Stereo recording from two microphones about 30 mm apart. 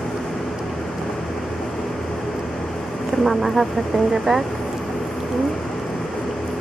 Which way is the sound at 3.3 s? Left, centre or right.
Centre.